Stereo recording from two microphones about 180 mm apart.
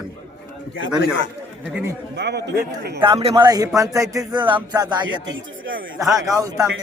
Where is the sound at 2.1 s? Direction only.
70° right (ahead or behind).